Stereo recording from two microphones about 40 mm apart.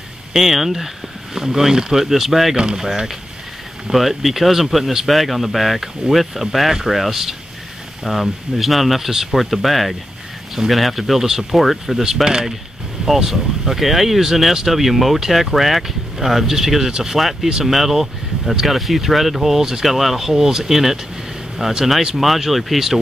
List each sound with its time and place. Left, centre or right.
0.3 s speech: centre
2.5 s speech: right
3.9 s speech: centre